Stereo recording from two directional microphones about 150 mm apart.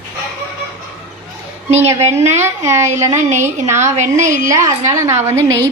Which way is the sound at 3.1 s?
50° right (ahead or behind).